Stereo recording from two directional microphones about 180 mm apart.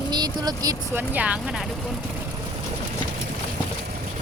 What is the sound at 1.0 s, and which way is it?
Speech, 5° right (ahead or behind).